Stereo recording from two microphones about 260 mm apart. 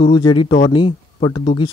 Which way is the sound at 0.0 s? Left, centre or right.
Centre.